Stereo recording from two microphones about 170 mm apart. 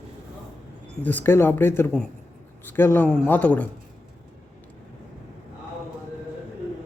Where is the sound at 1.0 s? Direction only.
10° left (ahead or behind).